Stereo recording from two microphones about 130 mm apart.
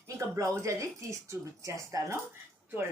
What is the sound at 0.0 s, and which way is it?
Speech, 25° right (ahead or behind).